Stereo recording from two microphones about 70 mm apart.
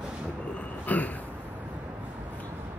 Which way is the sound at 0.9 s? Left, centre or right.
Left.